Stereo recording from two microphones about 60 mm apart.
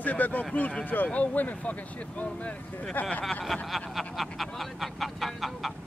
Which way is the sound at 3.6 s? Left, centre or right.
Centre.